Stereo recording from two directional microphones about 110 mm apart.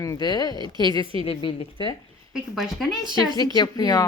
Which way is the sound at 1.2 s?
55° left (ahead or behind).